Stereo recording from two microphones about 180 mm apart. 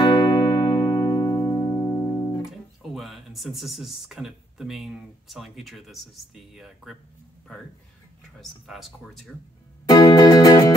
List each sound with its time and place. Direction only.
0.0 s music: 25° left (ahead or behind)
2.8 s speech: centre (ahead or behind)
8.4 s speech: centre (ahead or behind)
9.8 s music: 20° left (ahead or behind)